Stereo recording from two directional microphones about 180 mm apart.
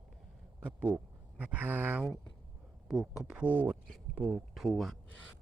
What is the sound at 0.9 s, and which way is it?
Speech, 10° right (ahead or behind).